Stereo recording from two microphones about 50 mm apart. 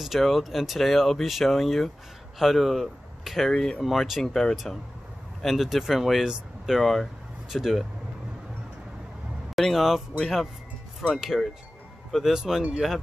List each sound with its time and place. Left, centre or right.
0.0 s speech: centre
9.6 s speech: centre